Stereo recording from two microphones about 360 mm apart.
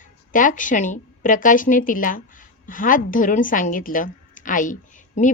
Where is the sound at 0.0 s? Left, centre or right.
Left.